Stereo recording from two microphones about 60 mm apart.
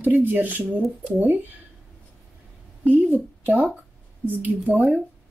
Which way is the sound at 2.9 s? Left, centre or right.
Right.